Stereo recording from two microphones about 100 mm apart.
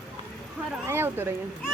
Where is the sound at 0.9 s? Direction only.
25° right (ahead or behind).